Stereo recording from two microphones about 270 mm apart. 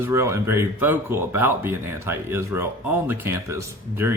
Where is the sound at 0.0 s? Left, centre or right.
Centre.